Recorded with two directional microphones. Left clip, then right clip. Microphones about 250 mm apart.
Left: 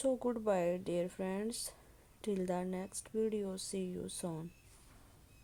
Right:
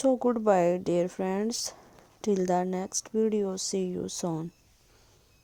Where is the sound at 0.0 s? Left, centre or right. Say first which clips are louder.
Right 10 dB; right.